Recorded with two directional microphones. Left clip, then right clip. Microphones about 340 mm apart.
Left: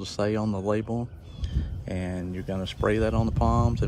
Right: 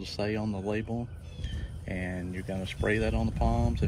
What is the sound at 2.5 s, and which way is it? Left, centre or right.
Speech, centre.